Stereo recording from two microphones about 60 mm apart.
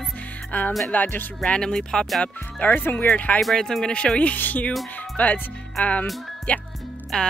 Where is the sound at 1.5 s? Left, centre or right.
Centre.